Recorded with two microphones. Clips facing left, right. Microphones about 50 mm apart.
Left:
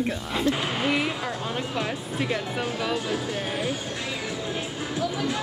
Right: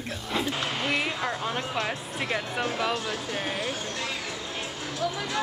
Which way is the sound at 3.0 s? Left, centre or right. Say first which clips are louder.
Left 3 dB; centre.